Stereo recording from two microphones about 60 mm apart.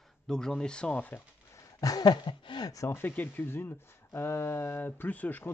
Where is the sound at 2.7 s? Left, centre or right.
Left.